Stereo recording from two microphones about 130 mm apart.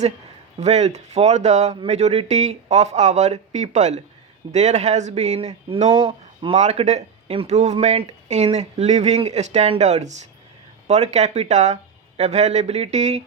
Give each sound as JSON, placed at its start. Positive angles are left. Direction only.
{"t": 0.6, "sound": "speech", "side_deg": -60}
{"t": 6.6, "sound": "speech", "side_deg": -60}